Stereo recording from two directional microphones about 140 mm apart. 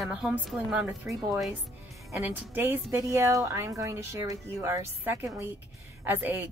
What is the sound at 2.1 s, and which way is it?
A woman's voice, 15° right (ahead or behind).